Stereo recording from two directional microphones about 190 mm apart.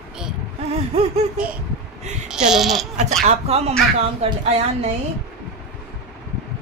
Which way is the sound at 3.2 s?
35° right (ahead or behind).